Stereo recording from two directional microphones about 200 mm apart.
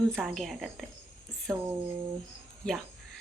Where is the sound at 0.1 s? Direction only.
Centre (ahead or behind).